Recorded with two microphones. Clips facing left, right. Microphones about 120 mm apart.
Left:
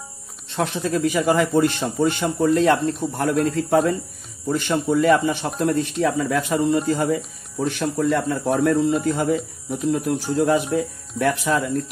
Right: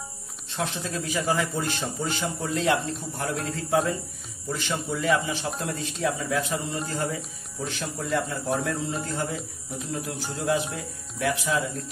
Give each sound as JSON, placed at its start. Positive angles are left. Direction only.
{"t": 0.5, "sound": "a man's voice", "side_deg": 60}
{"t": 7.6, "sound": "a man's voice", "side_deg": 50}